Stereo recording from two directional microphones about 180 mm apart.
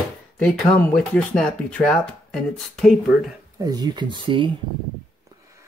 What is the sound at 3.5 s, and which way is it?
Speech, 20° right (ahead or behind).